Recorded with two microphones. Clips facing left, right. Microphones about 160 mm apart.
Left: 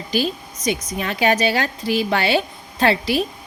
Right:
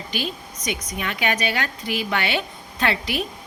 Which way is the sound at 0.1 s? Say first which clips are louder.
Left 8 dB; 35° left (ahead or behind).